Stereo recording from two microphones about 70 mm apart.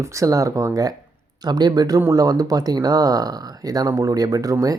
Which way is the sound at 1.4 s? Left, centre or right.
Right.